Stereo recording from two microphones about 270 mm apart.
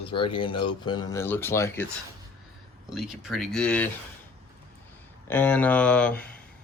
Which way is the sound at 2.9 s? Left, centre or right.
Centre.